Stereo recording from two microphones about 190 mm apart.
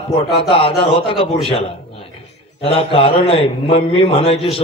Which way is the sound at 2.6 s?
30° left (ahead or behind).